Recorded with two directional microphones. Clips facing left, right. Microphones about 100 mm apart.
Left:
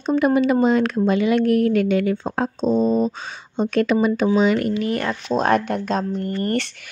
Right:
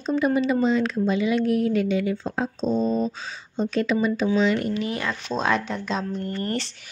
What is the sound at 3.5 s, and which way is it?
A woman's voice, 60° left (ahead or behind).